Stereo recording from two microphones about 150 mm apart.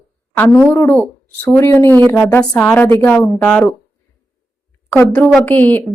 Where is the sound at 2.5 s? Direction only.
10° left (ahead or behind).